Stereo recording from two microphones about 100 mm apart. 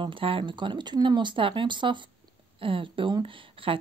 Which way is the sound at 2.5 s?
65° right (ahead or behind).